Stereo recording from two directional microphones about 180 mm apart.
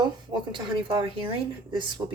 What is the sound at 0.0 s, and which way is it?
Speech, 25° right (ahead or behind).